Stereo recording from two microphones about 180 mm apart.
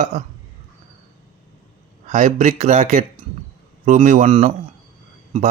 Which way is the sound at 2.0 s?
40° right (ahead or behind).